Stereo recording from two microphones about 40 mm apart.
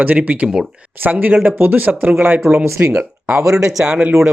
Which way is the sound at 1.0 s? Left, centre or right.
Right.